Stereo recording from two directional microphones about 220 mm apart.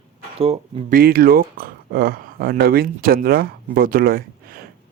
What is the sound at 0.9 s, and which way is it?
Speech, 45° right (ahead or behind).